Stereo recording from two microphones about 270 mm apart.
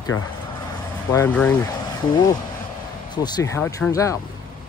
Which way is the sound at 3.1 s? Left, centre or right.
Centre.